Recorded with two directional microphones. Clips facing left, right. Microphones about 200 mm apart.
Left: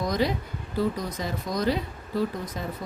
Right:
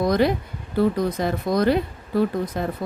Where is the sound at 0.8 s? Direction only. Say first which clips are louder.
Right 7 dB; 60° right (ahead or behind).